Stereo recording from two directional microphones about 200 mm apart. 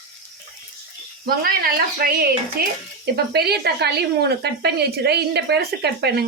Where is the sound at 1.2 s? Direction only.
50° right (ahead or behind).